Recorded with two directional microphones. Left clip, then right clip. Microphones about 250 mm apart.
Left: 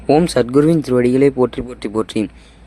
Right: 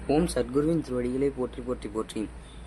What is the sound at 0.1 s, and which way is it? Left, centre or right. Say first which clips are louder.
Speech: left 12 dB; left.